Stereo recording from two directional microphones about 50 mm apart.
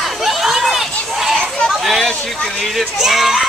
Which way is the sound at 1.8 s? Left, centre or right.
Centre.